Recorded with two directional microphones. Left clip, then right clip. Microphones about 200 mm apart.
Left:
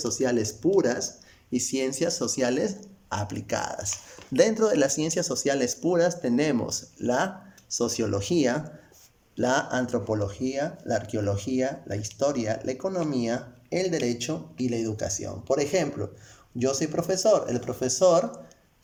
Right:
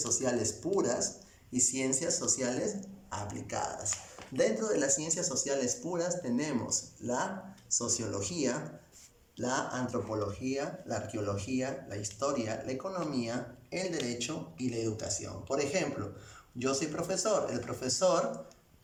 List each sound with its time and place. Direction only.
0.0 s speech: 40° left (ahead or behind)